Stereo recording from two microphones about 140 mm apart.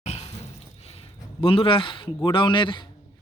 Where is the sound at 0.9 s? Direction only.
40° left (ahead or behind).